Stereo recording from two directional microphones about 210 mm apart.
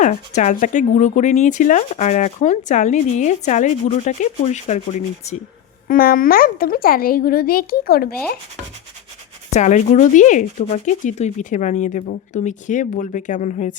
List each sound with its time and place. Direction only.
0.0 s speech: 35° left (ahead or behind)
9.5 s speech: 35° left (ahead or behind)